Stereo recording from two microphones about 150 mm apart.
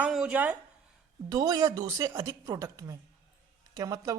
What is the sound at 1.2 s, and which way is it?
A woman's voice, 25° right (ahead or behind).